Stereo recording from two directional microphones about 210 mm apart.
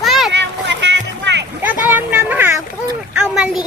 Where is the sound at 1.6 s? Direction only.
10° right (ahead or behind).